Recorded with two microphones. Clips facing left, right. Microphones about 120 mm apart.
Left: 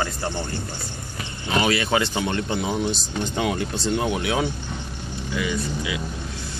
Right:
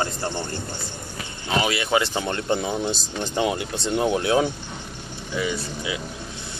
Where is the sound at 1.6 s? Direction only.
20° right (ahead or behind).